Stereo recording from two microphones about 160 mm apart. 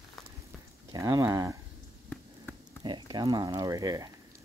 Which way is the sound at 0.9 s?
20° right (ahead or behind).